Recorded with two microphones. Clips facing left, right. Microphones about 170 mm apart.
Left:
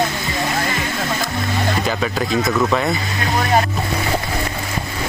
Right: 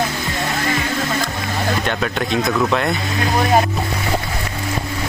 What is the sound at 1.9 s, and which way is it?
Speech, centre (ahead or behind).